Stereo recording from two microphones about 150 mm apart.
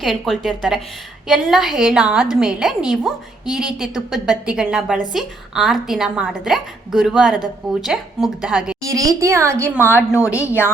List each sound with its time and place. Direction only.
0.0 s a woman's voice: centre (ahead or behind)
8.8 s a woman's voice: 25° right (ahead or behind)
9.8 s a woman's voice: 15° left (ahead or behind)